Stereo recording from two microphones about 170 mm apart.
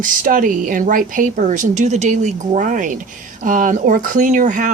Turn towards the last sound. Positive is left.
turn(degrees=-50)  # may be behind; listen again after turning